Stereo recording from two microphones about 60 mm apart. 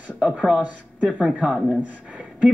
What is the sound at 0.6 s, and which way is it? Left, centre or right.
Speech, centre.